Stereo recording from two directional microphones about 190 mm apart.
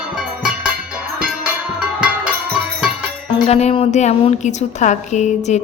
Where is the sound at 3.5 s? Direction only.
35° left (ahead or behind).